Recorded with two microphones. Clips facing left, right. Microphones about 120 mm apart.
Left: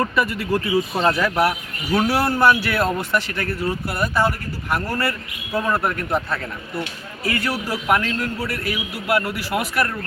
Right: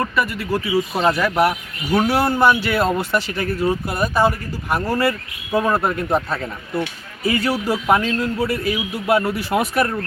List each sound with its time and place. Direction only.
0.0 s speech: centre (ahead or behind)
1.9 s speech: 5° left (ahead or behind)
2.1 s a man's voice: 20° right (ahead or behind)
3.3 s a man's voice: 15° right (ahead or behind)